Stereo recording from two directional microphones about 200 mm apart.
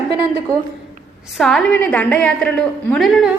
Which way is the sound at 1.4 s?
Centre (ahead or behind).